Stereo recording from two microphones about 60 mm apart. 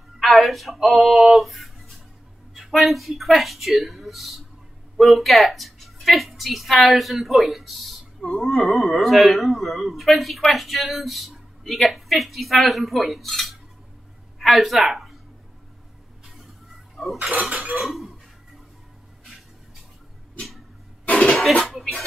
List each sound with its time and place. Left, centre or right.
0.2 s a woman's voice: centre
16.9 s speech: centre
17.3 s cutlery: right
17.7 s a woman's voice: centre
20.3 s a sound: centre
21.1 s cough: centre
21.6 s speech: centre